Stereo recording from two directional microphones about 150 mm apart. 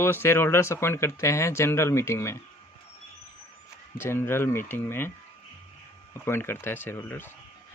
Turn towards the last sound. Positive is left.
turn(degrees=15)  # may be behind; listen again after turning